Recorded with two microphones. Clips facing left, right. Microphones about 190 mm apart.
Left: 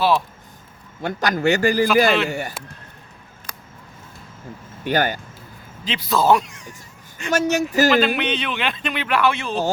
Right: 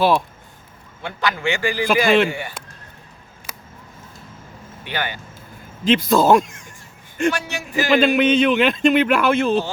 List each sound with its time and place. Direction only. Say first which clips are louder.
1.0 s a man's voice: left 4 dB; 45° left (ahead or behind)
2.0 s speech: right 3 dB; 50° right (ahead or behind)
2.3 s a man's voice: left 3 dB; 45° left (ahead or behind)
3.5 s a sound: right 1 dB; 5° right (ahead or behind)
4.8 s speech: left 7 dB; 45° left (ahead or behind)
5.8 s speech: right 5 dB; 50° right (ahead or behind)
7.3 s speech: left 4 dB; 40° left (ahead or behind)
8.2 s speech: right 9 dB; 45° right (ahead or behind)